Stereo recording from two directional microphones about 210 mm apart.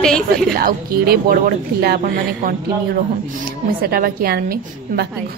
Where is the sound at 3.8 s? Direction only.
45° right (ahead or behind).